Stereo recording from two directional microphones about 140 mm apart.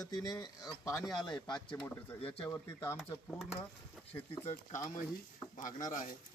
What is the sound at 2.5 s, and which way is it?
Speech, 20° left (ahead or behind).